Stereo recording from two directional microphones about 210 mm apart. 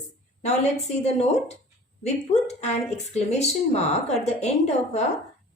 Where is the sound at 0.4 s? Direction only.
30° left (ahead or behind).